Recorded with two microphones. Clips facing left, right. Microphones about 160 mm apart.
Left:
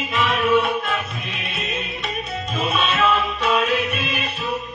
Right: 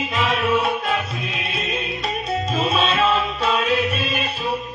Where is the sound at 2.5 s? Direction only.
30° right (ahead or behind).